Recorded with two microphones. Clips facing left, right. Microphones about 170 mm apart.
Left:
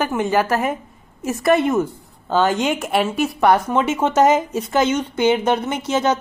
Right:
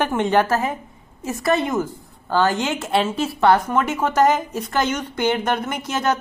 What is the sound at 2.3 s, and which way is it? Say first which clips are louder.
A woman's voice: left 2 dB; 10° left (ahead or behind).